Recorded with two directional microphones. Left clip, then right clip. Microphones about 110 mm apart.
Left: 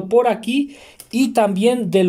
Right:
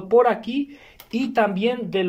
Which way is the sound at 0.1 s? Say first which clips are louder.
Left 1 dB; 15° left (ahead or behind).